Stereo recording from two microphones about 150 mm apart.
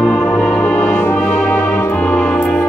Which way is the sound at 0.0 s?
Centre (ahead or behind).